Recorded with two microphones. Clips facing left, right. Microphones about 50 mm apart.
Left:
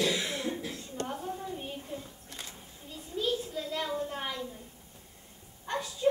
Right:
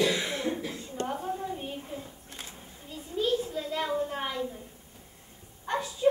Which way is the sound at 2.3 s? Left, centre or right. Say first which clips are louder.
Left 3 dB; right.